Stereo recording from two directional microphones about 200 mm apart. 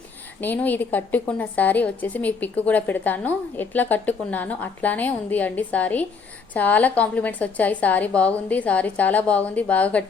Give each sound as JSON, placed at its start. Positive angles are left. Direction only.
{"t": 0.4, "sound": "a woman's voice", "side_deg": 10}